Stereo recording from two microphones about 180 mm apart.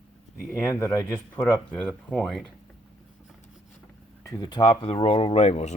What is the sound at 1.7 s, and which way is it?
Speech, 5° left (ahead or behind).